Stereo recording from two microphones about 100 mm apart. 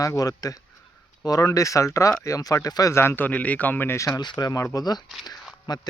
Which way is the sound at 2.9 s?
25° left (ahead or behind).